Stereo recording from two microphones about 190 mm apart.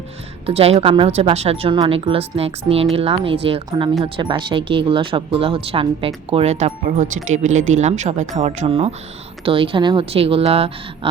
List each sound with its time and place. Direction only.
0.4 s a woman's voice: 30° right (ahead or behind)